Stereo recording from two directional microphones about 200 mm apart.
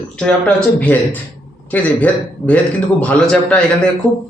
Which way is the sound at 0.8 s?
10° left (ahead or behind).